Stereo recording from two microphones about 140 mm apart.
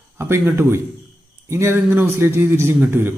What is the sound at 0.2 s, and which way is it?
A man's voice, 15° right (ahead or behind).